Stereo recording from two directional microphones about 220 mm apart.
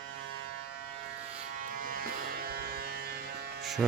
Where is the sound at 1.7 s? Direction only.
40° right (ahead or behind).